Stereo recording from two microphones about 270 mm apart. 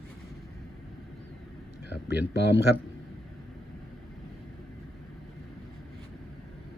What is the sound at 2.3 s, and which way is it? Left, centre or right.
Speech, left.